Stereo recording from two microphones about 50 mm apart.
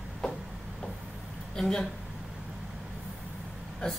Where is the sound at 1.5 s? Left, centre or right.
Centre.